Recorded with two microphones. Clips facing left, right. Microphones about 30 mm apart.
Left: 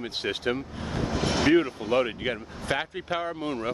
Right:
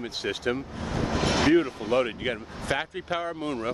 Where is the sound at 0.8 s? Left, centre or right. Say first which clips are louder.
Right 2 dB; right.